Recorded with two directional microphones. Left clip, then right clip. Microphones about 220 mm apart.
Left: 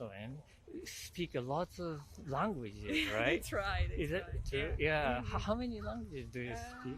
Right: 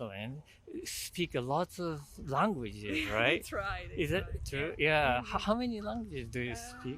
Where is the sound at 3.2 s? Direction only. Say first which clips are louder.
Right 7 dB; 45° right (ahead or behind).